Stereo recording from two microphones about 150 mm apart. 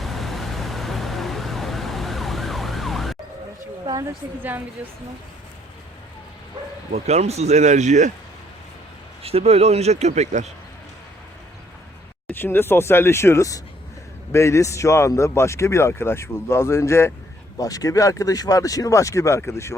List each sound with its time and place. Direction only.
0.0 s vehicle: centre (ahead or behind)
4.4 s a woman's voice: 10° right (ahead or behind)
6.9 s speech: 45° right (ahead or behind)
9.2 s speech: 40° right (ahead or behind)
12.3 s a man's voice: 15° left (ahead or behind)